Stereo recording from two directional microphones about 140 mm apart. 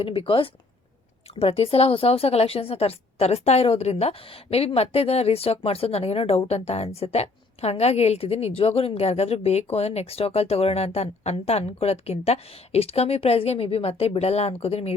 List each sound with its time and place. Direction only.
0.0 s a woman's voice: 40° left (ahead or behind)